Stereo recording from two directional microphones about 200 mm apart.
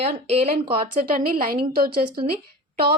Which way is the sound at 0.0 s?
30° right (ahead or behind).